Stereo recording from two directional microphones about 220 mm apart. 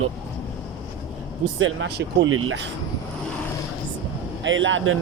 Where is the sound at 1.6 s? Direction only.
50° right (ahead or behind).